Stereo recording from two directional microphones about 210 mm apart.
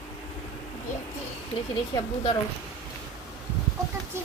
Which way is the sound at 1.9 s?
20° left (ahead or behind).